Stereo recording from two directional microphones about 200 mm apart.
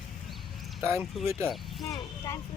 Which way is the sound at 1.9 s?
15° left (ahead or behind).